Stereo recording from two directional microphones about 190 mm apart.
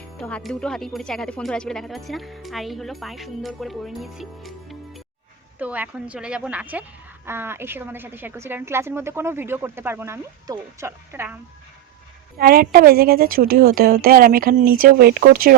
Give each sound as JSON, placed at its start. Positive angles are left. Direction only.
{"t": 0.2, "sound": "a woman's voice", "side_deg": 5}
{"t": 12.4, "sound": "a woman's voice", "side_deg": -50}